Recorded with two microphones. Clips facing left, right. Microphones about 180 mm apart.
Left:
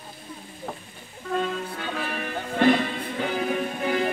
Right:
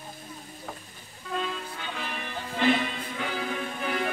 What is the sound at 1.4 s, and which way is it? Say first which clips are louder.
Music: left 5 dB; 50° left (ahead or behind).